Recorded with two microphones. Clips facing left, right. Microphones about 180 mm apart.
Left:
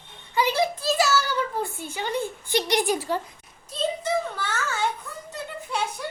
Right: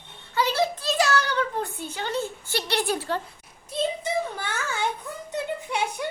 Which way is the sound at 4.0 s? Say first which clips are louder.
Left 1 dB; 15° right (ahead or behind).